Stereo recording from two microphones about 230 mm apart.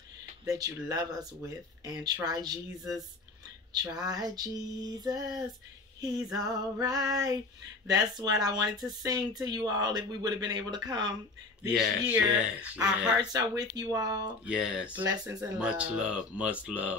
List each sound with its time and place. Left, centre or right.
0.5 s speech: centre
2.8 s speech: centre
3.8 s speech: centre
11.6 s speech: centre
13.2 s speech: centre
14.4 s speech: centre